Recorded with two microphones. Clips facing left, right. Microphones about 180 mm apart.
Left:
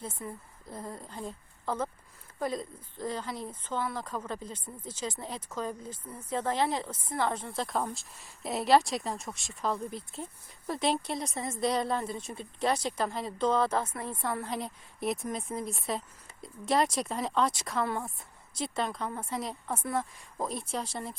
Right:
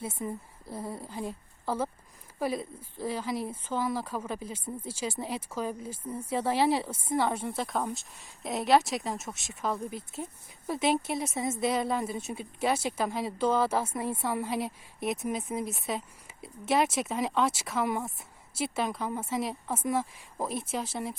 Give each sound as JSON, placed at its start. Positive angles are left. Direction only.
{"t": 0.2, "sound": "speech", "side_deg": -20}
{"t": 0.7, "sound": "speech", "side_deg": -5}